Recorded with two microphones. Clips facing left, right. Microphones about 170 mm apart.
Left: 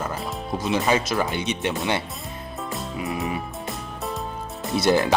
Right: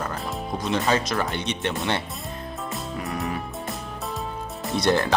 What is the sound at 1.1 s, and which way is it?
Speech, 5° left (ahead or behind).